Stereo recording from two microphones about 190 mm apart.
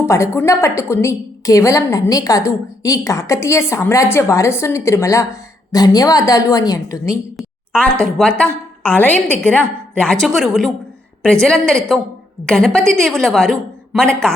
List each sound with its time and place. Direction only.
0.0 s a woman's voice: 15° left (ahead or behind)
7.3 s a woman's voice: 5° left (ahead or behind)